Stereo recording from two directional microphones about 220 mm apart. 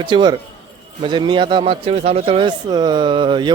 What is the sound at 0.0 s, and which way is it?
Speech, 20° right (ahead or behind).